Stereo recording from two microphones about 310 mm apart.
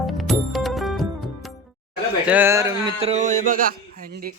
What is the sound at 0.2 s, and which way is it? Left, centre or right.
Music, centre.